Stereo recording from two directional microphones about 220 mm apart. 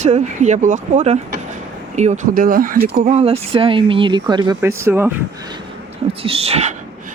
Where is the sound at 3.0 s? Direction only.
30° right (ahead or behind); by 5.1 s 10° right (ahead or behind).